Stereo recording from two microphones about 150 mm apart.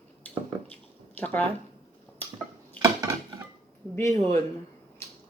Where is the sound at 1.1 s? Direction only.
10° left (ahead or behind).